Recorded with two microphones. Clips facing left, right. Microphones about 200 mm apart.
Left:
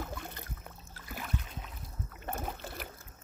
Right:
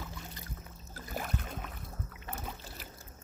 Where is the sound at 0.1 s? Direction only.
60° left (ahead or behind).